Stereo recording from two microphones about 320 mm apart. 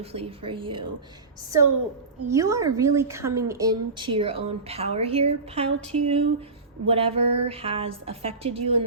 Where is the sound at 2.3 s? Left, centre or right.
Centre.